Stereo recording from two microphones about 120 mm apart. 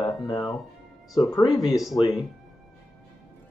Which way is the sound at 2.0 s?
45° left (ahead or behind).